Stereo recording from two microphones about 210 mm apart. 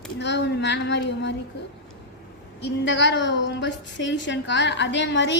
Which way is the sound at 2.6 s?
55° left (ahead or behind).